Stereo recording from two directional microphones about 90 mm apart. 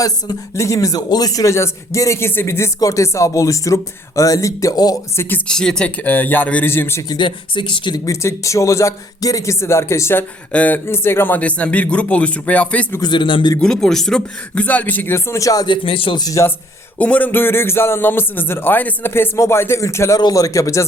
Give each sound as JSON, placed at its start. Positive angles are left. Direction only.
{"t": 0.0, "sound": "speech", "side_deg": 40}
{"t": 5.1, "sound": "a man's voice", "side_deg": 25}
{"t": 5.5, "sound": "a man's voice", "side_deg": 5}
{"t": 7.1, "sound": "speech", "side_deg": 60}
{"t": 8.0, "sound": "speech", "side_deg": 35}
{"t": 10.5, "sound": "speech", "side_deg": 20}
{"t": 13.0, "sound": "speech", "side_deg": 60}
{"t": 13.6, "sound": "speech", "side_deg": 5}
{"t": 15.6, "sound": "speech", "side_deg": 70}
{"t": 16.4, "sound": "speech", "side_deg": 30}
{"t": 17.0, "sound": "a man's voice", "side_deg": 15}
{"t": 20.1, "sound": "speech", "side_deg": 45}